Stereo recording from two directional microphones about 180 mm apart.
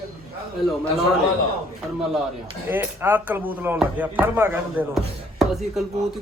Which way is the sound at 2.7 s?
10° right (ahead or behind).